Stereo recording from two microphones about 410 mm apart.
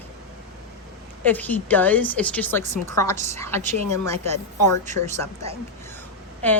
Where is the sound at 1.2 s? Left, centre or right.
Centre.